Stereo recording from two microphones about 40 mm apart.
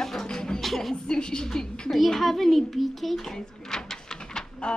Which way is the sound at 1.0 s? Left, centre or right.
Centre.